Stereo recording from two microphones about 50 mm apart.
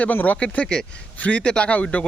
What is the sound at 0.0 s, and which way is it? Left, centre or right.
Speech, left.